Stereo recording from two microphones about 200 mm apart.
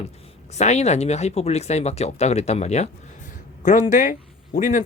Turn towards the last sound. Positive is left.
turn(degrees=40)  # may be behind; listen again after turning